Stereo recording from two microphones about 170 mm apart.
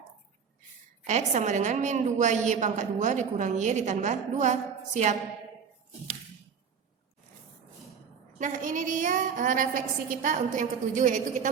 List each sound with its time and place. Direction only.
1.0 s a woman's voice: 45° right (ahead or behind)
8.4 s a woman's voice: 45° right (ahead or behind)